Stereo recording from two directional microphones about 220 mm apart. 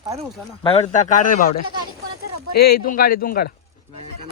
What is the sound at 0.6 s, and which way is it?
A man's voice, 25° left (ahead or behind).